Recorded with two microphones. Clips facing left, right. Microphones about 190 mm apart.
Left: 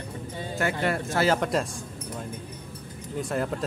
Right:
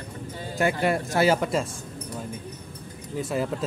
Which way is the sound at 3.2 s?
5° right (ahead or behind).